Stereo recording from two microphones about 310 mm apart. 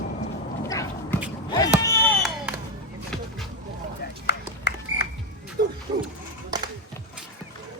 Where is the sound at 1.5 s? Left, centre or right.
Centre.